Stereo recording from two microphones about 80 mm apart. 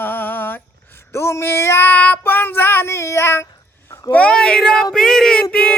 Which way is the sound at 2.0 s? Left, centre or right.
Left.